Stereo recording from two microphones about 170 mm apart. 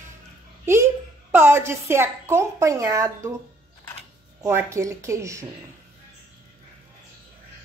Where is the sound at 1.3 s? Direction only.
15° right (ahead or behind).